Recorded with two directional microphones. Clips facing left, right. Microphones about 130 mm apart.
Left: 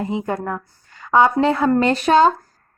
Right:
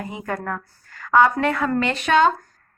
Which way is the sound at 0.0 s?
25° left (ahead or behind).